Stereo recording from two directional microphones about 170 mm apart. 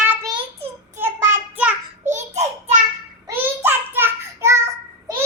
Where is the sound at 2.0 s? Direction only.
45° right (ahead or behind).